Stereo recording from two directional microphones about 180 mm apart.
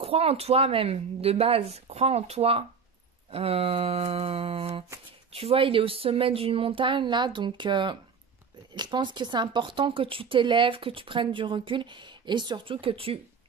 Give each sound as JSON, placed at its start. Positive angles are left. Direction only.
{"t": 0.0, "sound": "a woman's voice", "side_deg": -35}